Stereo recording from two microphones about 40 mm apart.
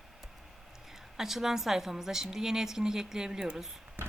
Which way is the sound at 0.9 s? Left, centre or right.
Centre.